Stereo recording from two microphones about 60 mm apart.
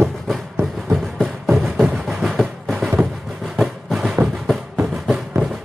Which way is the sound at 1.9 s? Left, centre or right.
Centre.